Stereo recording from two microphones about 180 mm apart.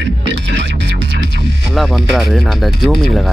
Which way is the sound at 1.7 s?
Centre (ahead or behind).